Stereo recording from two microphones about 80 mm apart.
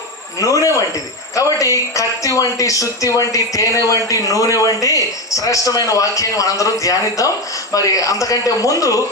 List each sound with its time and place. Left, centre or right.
0.3 s speech: left